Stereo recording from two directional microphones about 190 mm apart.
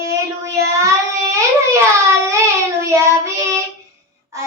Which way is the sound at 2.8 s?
15° right (ahead or behind).